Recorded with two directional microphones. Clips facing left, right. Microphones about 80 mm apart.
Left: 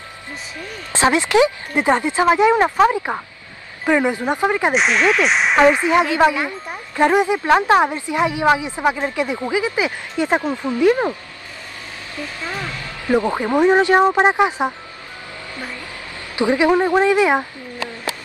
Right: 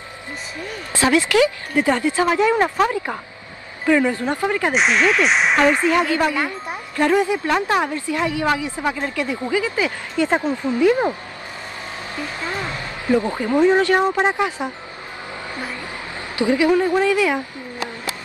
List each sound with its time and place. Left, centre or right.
0.9 s speech: left
4.7 s speech: centre
5.7 s speech: centre
12.4 s speech: right
13.1 s speech: left
16.3 s speech: left